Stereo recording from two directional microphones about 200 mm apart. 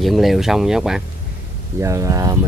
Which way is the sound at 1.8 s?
15° right (ahead or behind).